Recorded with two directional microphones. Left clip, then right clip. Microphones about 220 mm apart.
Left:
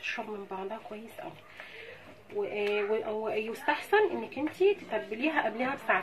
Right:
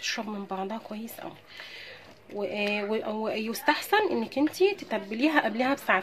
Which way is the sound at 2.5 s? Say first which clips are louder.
Right 1 dB; 55° right (ahead or behind).